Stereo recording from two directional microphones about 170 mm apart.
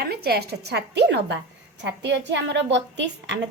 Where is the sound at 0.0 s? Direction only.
65° right (ahead or behind).